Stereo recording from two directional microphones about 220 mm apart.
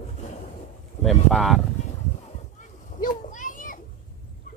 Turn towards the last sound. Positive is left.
turn(degrees=35)  # may be behind; listen again after turning